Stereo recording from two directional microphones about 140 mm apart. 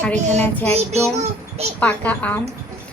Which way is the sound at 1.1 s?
50° right (ahead or behind).